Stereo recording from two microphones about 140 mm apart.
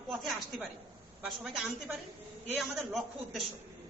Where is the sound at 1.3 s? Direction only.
Centre (ahead or behind).